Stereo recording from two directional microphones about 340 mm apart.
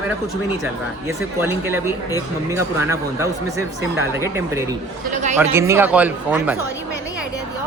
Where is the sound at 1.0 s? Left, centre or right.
Centre.